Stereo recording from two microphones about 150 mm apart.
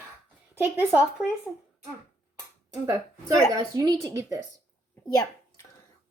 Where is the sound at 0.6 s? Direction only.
10° right (ahead or behind).